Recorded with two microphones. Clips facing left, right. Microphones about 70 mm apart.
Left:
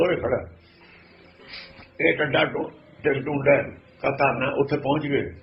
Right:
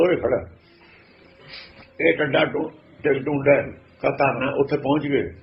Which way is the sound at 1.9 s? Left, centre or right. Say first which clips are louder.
Right 2 dB; centre.